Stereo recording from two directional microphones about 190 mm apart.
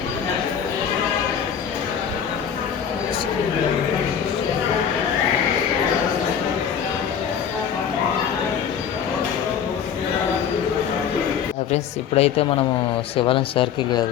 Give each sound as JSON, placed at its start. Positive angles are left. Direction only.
{"t": 11.7, "sound": "a woman's voice", "side_deg": 35}